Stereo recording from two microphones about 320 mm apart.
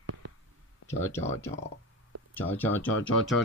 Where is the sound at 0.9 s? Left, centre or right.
Centre.